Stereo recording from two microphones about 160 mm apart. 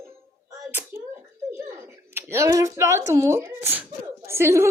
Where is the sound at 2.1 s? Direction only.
15° right (ahead or behind).